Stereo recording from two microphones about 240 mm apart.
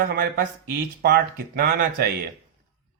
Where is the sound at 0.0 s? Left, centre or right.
Right.